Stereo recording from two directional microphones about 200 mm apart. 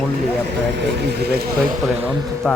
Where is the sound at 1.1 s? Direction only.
55° right (ahead or behind).